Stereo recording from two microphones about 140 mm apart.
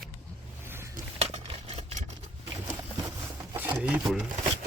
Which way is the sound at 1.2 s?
45° right (ahead or behind).